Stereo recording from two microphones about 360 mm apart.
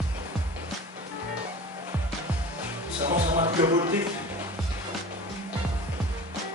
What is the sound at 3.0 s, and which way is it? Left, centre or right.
Music, centre.